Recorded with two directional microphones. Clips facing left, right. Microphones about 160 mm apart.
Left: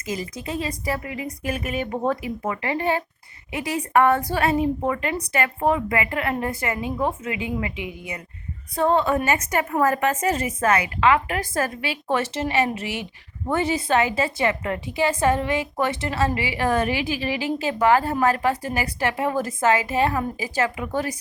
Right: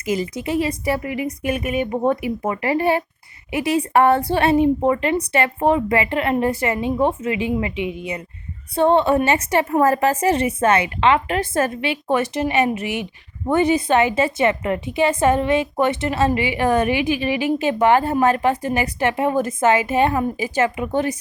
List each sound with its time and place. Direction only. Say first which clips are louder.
0.0 s a woman's voice: right 7 dB; 30° right (ahead or behind)
1.5 s speech: right 4 dB; 15° right (ahead or behind)
2.4 s a woman's voice: right 5 dB; 30° right (ahead or behind)